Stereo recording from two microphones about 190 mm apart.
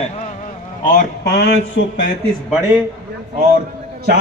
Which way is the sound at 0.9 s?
55° left (ahead or behind).